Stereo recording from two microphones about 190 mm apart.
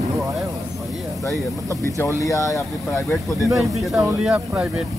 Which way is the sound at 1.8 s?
15° left (ahead or behind).